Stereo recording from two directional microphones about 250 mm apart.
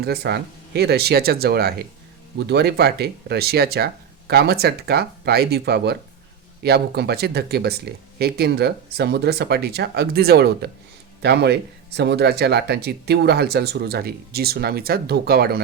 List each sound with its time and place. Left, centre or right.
0.0 s speech: right